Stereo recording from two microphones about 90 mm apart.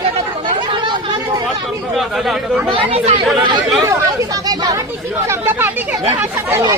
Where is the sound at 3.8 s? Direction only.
40° right (ahead or behind).